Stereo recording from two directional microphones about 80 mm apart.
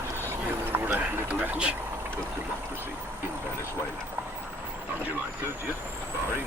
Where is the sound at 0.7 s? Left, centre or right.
Right.